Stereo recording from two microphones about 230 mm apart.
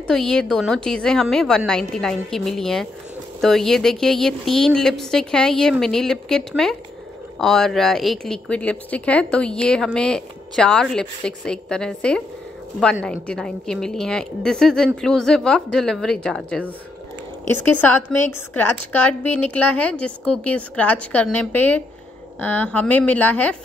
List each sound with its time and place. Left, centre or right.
0.0 s a woman's voice: centre